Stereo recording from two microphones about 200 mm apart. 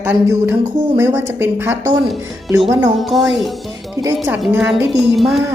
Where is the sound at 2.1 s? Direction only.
Centre (ahead or behind).